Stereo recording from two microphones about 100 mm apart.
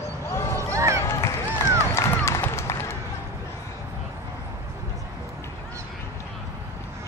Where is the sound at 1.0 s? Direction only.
30° left (ahead or behind).